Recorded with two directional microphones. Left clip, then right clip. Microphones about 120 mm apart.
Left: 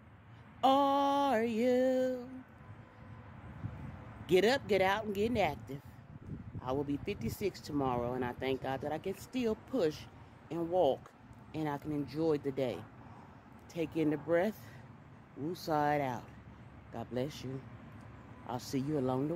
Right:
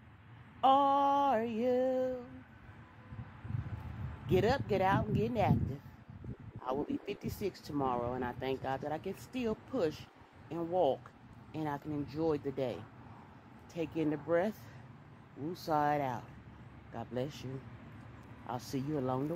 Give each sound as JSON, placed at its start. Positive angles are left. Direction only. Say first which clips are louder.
{"t": 0.6, "sound": "a sound", "louder": "right 1 dB", "side_deg": 30}
{"t": 4.3, "sound": "speech", "louder": "left 2 dB", "side_deg": 20}
{"t": 18.5, "sound": "speech", "louder": "left 2 dB", "side_deg": 15}